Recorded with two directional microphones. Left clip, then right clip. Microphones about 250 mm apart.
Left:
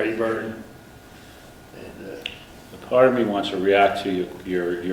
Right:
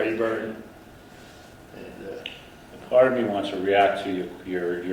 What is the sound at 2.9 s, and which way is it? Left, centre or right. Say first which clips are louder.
A man's voice: left 2 dB; centre.